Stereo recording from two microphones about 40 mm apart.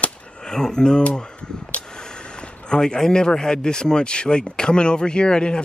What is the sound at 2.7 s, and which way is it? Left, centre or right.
Speech, centre.